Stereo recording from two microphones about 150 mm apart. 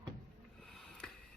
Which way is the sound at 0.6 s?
5° left (ahead or behind).